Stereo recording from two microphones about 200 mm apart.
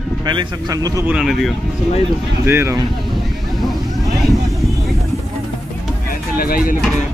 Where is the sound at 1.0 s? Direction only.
5° right (ahead or behind).